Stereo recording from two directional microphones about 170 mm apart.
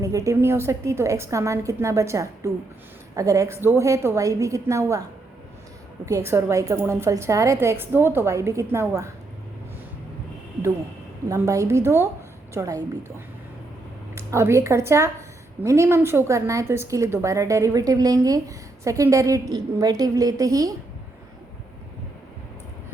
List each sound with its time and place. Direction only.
0.0 s a woman's voice: 20° right (ahead or behind)
6.1 s a woman's voice: 15° right (ahead or behind)
11.3 s a woman's voice: 20° right (ahead or behind)